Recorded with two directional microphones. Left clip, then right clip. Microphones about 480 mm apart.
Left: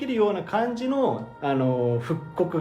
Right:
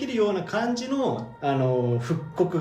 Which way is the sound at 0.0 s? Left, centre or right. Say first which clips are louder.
Left 1 dB; centre.